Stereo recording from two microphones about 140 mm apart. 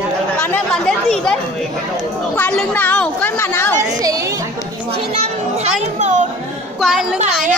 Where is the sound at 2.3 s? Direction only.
15° left (ahead or behind).